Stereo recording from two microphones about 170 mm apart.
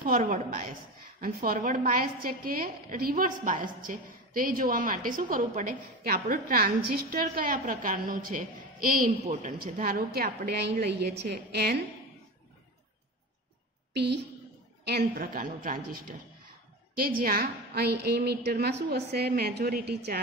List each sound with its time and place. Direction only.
0.0 s a woman's voice: 60° right (ahead or behind)
13.9 s a woman's voice: 80° right
14.9 s a woman's voice: 60° right (ahead or behind)